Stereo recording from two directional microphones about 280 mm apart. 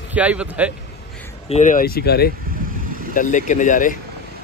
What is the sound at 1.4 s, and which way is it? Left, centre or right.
Speech, left.